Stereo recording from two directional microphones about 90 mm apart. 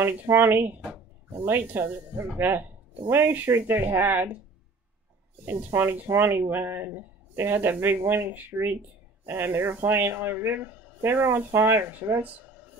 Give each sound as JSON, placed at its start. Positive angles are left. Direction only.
{"t": 0.1, "sound": "speech", "side_deg": -25}
{"t": 5.4, "sound": "speech", "side_deg": -25}